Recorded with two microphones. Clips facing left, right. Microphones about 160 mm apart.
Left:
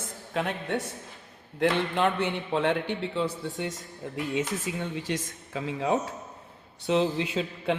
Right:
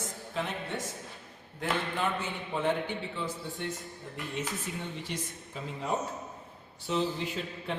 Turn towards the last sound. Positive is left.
turn(degrees=90)